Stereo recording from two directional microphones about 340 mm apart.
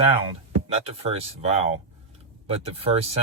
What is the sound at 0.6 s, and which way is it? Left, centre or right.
Speech, centre.